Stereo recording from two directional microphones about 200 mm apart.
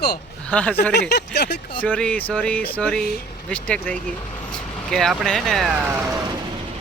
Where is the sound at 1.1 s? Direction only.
55° left (ahead or behind).